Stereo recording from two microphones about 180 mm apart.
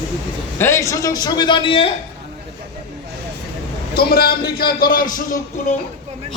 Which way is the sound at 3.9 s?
60° left (ahead or behind).